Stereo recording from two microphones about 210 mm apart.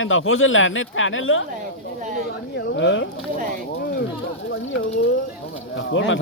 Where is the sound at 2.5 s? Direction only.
60° left (ahead or behind).